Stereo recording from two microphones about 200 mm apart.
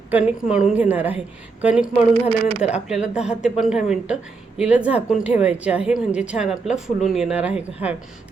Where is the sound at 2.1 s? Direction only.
30° right (ahead or behind).